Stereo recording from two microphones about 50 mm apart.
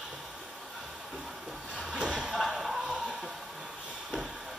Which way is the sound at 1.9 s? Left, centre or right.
Centre.